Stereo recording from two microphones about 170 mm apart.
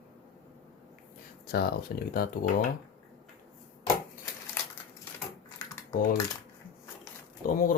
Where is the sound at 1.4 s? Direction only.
65° left (ahead or behind).